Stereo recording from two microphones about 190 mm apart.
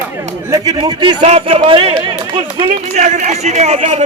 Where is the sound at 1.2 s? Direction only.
35° right (ahead or behind).